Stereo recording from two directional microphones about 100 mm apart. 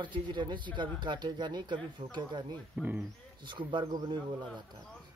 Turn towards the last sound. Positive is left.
turn(degrees=-50)  # may be behind; listen again after turning